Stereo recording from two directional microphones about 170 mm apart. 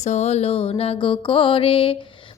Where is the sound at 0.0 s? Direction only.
40° left (ahead or behind).